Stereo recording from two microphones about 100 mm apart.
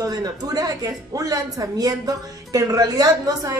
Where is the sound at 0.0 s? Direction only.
40° right (ahead or behind).